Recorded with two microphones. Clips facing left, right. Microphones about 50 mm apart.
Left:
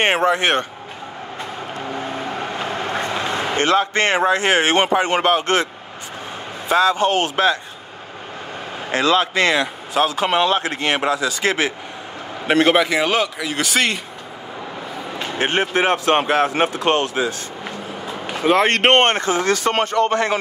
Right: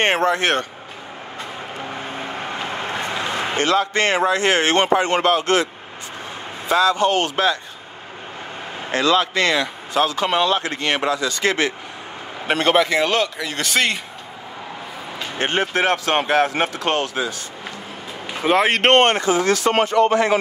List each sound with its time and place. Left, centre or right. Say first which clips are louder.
0.0 s speech: left 1 dB; centre
2.8 s a man's voice: left 2 dB; left
6.7 s speech: left 1 dB; left
8.9 s speech: left 1 dB; centre
15.3 s speech: left 1 dB; centre; by 17.3 s left
18.4 s speech: left 1 dB; centre
18.9 s speech: right 1 dB; left